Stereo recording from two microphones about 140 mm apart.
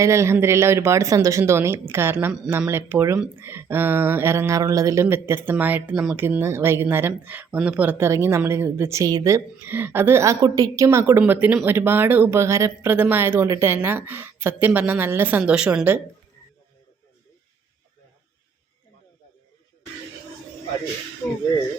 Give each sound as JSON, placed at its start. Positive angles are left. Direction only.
{"t": 0.0, "sound": "speech", "side_deg": -20}
{"t": 6.1, "sound": "speech", "side_deg": -15}